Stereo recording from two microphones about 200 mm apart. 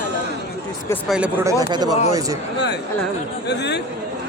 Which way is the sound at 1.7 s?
20° right (ahead or behind).